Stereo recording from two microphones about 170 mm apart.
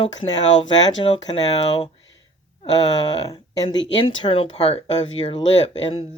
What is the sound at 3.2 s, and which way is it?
Speech, 25° left (ahead or behind).